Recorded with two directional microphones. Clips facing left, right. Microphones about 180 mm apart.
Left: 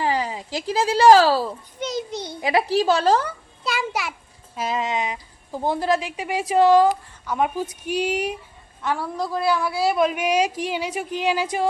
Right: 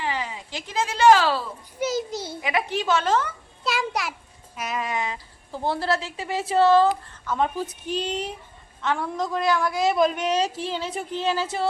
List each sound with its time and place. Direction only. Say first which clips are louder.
0.0 s speech: left 6 dB; 40° left (ahead or behind)
1.8 s a child's voice: right 2 dB; 5° right (ahead or behind)
2.4 s a woman's voice: left 7 dB; 35° left (ahead or behind)
3.6 s a child's voice: even; centre (ahead or behind)
4.5 s a woman's voice: left 4 dB; 25° left (ahead or behind)